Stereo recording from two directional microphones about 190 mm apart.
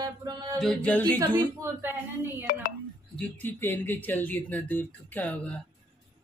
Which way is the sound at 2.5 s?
50° left (ahead or behind).